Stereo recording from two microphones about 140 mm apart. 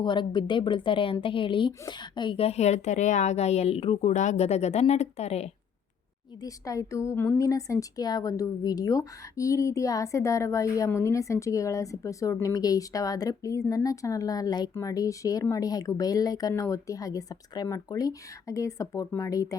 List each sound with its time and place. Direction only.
0.0 s a woman's voice: 35° left (ahead or behind); by 5.5 s 50° left (ahead or behind)
6.4 s a woman's voice: 25° left (ahead or behind)